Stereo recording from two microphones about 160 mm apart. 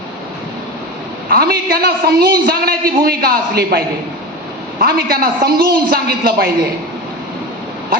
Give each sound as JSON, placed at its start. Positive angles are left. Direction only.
{"t": 1.3, "sound": "a man's voice", "side_deg": -70}